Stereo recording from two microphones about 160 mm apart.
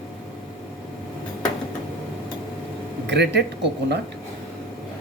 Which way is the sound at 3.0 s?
90° right.